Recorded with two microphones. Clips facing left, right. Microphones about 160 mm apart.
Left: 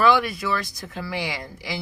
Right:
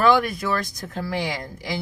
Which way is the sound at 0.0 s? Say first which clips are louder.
Right 1 dB; 50° right (ahead or behind).